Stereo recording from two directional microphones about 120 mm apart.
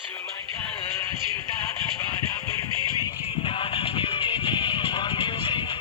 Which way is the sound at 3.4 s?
50° left (ahead or behind).